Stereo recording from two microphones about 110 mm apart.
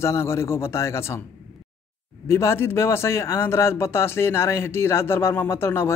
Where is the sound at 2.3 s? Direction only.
25° left (ahead or behind).